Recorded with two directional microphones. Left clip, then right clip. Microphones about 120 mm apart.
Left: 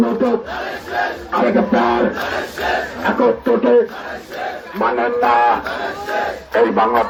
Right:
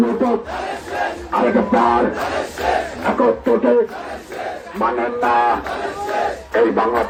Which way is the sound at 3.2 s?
70° left (ahead or behind).